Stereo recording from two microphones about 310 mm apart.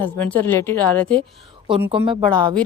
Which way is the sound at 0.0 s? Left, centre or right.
Centre.